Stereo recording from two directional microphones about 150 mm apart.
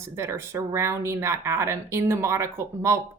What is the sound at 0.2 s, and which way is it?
Speech, 20° right (ahead or behind).